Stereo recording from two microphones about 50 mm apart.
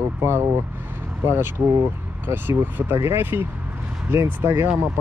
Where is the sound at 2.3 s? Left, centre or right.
Right.